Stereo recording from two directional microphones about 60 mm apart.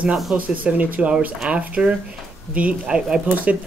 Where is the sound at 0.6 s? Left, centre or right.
Right.